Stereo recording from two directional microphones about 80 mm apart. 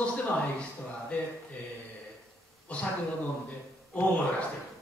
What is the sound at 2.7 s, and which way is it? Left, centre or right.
Speech, centre.